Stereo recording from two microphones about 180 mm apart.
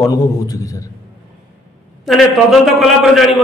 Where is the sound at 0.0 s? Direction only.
20° left (ahead or behind).